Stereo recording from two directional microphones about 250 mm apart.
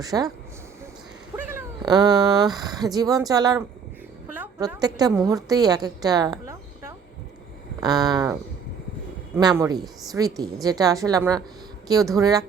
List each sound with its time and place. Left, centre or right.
0.0 s a woman's voice: centre
1.4 s a woman's voice: centre